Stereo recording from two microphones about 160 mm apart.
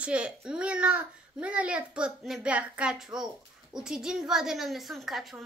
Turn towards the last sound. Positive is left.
turn(degrees=0)  # may be behind; listen again after turning